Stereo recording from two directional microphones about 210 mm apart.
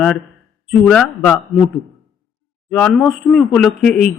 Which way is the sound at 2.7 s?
Centre (ahead or behind).